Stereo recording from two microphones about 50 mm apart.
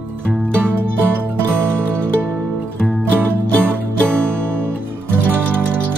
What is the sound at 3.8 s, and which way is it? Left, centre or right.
Music, right.